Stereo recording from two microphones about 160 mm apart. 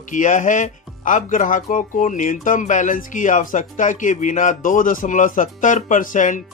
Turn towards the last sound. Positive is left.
turn(degrees=55)  # may be behind; listen again after turning